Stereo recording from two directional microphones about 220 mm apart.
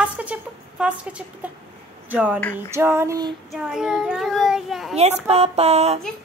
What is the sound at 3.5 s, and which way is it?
A child's voice, centre (ahead or behind).